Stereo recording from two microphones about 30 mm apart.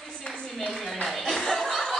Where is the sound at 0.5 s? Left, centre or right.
Centre.